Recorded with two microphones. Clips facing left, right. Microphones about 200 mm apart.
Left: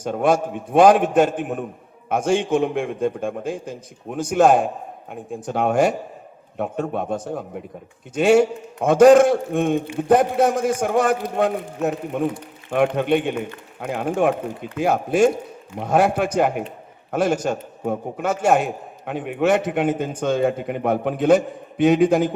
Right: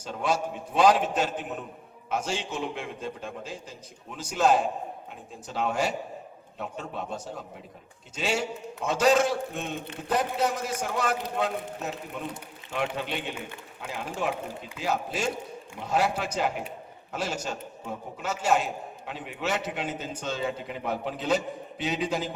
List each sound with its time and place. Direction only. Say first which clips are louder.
0.0 s a man's voice: left 9 dB; 55° left (ahead or behind)